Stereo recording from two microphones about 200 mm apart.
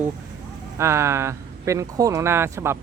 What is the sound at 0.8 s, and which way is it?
Speech, 15° right (ahead or behind).